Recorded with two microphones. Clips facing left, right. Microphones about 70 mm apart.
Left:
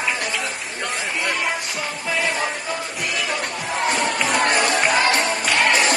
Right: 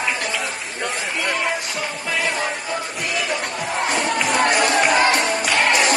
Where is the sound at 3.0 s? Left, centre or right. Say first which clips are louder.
Right 1 dB; centre.